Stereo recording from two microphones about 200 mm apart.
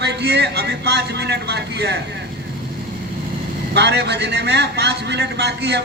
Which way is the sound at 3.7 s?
55° right (ahead or behind).